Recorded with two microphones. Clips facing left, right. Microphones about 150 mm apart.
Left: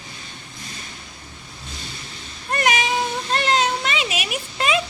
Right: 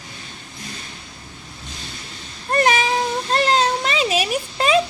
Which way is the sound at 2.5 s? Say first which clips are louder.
Right 3 dB; 35° right (ahead or behind).